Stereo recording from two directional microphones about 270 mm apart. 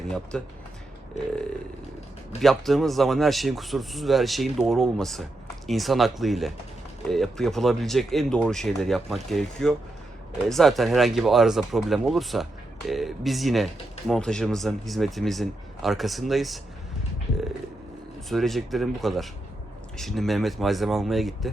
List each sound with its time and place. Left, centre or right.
0.1 s speech: centre
1.2 s burping: left
2.4 s speech: centre
18.3 s speech: centre